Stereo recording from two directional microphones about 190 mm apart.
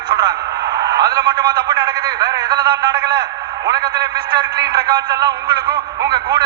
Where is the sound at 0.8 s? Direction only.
20° right (ahead or behind).